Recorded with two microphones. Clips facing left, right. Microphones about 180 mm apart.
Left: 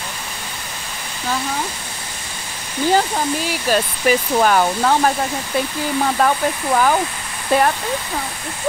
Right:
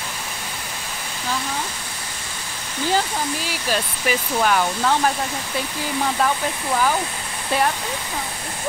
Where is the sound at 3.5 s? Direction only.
45° left (ahead or behind).